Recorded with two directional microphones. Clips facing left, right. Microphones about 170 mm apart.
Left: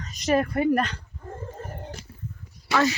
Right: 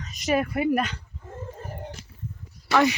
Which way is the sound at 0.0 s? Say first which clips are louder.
Left 2 dB; centre (ahead or behind).